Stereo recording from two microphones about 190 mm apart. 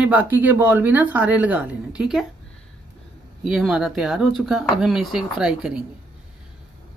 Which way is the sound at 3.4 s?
5° right (ahead or behind).